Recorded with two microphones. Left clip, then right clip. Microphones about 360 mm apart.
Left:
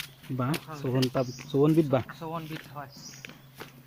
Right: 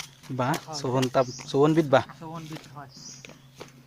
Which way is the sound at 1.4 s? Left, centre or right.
Right.